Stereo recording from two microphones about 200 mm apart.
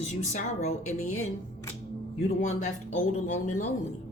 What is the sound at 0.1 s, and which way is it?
Speech, 35° left (ahead or behind).